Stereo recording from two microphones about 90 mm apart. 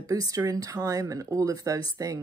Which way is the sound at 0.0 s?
40° right (ahead or behind).